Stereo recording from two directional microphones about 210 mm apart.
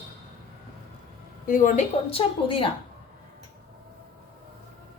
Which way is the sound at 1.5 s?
40° left (ahead or behind).